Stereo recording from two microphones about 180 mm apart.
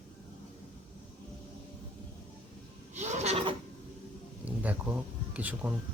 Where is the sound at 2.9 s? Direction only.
40° right (ahead or behind).